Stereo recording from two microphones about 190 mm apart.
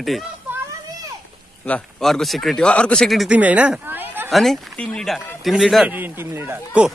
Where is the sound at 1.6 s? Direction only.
5° left (ahead or behind).